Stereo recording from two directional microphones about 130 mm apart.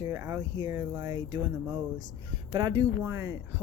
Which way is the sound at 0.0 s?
25° right (ahead or behind).